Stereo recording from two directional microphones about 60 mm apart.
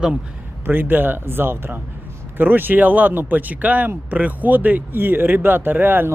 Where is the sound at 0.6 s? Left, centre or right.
Right.